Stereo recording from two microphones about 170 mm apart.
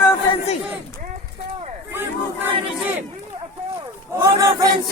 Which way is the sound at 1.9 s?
10° right (ahead or behind).